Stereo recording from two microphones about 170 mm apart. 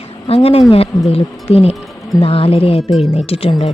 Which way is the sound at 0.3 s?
35° left (ahead or behind).